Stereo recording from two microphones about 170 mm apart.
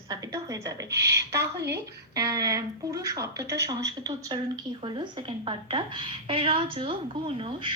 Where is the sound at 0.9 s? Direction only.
80° right.